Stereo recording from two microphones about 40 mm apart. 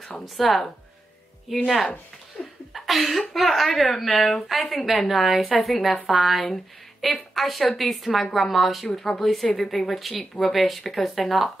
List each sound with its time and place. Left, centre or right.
0.2 s speech: centre
2.4 s laughter: left
2.7 s speech: centre
8.9 s a woman's voice: centre
9.2 s speech: centre